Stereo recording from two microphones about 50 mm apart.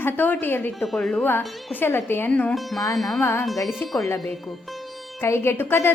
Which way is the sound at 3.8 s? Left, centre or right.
Left.